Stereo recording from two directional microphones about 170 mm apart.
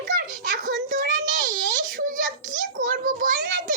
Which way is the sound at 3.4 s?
90° right.